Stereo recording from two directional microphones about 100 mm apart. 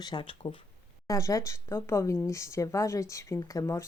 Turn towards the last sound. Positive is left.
turn(degrees=35)  # may be behind; listen again after turning